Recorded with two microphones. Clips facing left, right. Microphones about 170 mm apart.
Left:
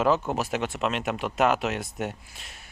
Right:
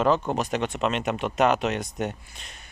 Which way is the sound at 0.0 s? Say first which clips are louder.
Right 1 dB; 5° left (ahead or behind).